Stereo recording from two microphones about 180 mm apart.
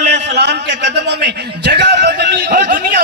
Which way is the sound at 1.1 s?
70° right (ahead or behind).